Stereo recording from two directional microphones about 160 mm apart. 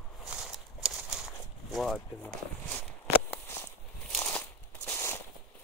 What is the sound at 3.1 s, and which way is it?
Walk, 10° left (ahead or behind).